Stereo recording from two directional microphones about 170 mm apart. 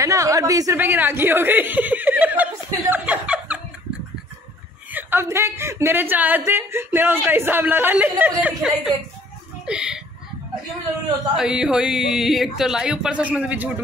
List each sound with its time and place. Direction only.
0.0 s chuckle: 20° right (ahead or behind)
4.9 s speech: 15° right (ahead or behind)
11.3 s speech: 5° right (ahead or behind)